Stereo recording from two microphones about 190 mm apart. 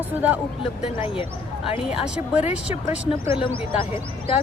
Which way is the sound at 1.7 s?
30° left (ahead or behind).